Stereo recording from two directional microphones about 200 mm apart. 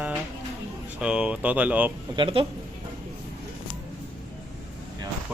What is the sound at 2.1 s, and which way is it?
Speech, 25° right (ahead or behind).